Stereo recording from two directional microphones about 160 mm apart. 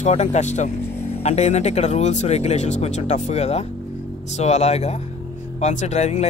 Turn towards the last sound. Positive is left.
turn(degrees=45)  # may be behind; listen again after turning